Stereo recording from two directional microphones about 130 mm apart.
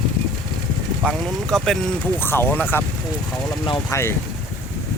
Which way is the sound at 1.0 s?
5° left (ahead or behind).